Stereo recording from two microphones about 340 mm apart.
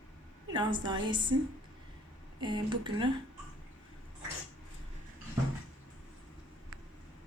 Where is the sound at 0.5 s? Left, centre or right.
Centre.